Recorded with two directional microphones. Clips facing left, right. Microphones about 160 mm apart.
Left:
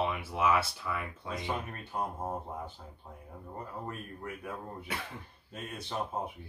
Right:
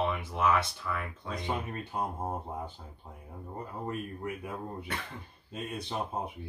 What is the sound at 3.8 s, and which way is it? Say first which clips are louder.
Speech: right 5 dB; 20° right (ahead or behind).